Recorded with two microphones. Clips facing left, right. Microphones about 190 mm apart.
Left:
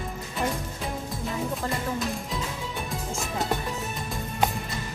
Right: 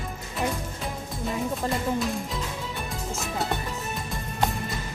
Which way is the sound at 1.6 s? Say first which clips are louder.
Right 5 dB; 15° right (ahead or behind).